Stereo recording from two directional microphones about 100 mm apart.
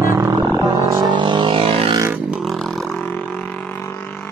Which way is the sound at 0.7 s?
45° right (ahead or behind).